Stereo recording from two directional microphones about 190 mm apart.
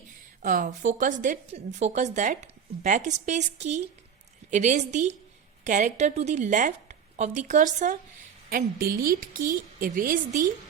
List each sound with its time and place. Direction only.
0.4 s a woman's voice: 40° right (ahead or behind)